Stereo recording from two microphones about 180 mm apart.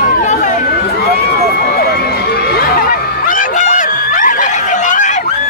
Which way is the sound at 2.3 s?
55° left (ahead or behind).